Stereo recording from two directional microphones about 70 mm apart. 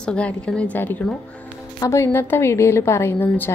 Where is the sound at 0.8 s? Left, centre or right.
Left.